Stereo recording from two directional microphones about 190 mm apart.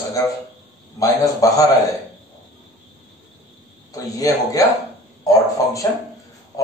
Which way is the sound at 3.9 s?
20° left (ahead or behind).